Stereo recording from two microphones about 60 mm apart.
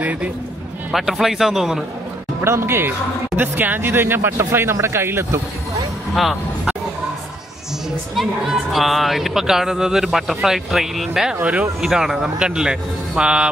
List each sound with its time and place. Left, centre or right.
0.0 s a man's voice: right
0.9 s a man's voice: centre
2.4 s a man's voice: right
3.3 s a man's voice: right
8.2 s a man's voice: centre